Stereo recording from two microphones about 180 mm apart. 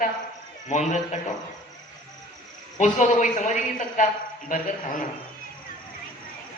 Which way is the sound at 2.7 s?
40° left (ahead or behind).